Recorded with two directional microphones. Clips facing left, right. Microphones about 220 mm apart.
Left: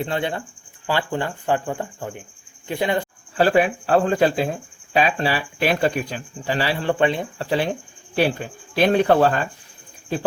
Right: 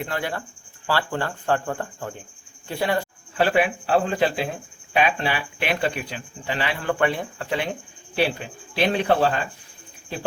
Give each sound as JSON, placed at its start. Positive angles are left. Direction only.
{"t": 0.0, "sound": "cricket", "side_deg": 25}
{"t": 0.9, "sound": "speech", "side_deg": 15}
{"t": 3.3, "sound": "speech", "side_deg": 40}
{"t": 8.1, "sound": "speech", "side_deg": 45}